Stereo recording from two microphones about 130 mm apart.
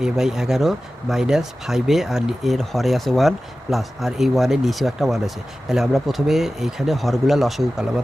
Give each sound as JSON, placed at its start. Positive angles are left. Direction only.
{"t": 0.0, "sound": "speech", "side_deg": -5}